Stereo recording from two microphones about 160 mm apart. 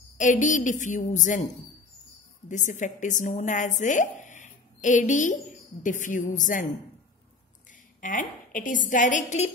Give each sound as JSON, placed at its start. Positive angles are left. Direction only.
{"t": 0.2, "sound": "a woman's voice", "side_deg": 50}
{"t": 2.4, "sound": "a woman's voice", "side_deg": 50}
{"t": 8.0, "sound": "a woman's voice", "side_deg": 55}